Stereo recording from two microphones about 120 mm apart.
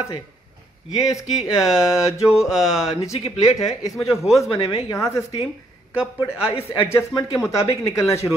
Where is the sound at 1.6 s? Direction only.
5° right (ahead or behind).